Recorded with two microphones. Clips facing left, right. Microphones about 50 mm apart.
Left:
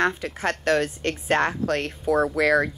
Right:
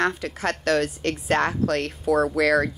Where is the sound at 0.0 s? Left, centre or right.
Left.